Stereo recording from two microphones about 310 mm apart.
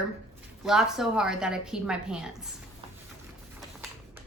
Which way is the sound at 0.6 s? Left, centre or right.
Centre.